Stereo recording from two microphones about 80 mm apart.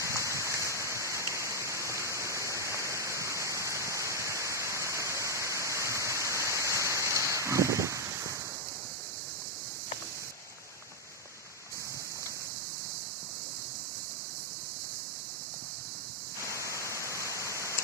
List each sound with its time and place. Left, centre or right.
0.0 s a sound: right
16.5 s static: right
17.1 s waterfall: left